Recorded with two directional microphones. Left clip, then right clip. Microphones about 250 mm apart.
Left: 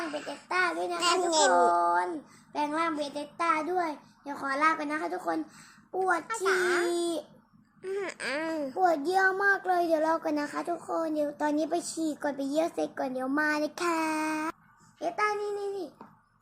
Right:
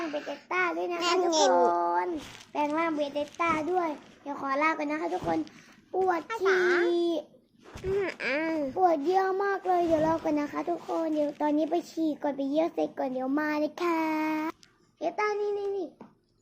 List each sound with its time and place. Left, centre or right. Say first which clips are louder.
0.0 s a child's voice: right 2 dB; centre
7.9 s a child's voice: right 4 dB; centre
8.8 s a child's voice: even; left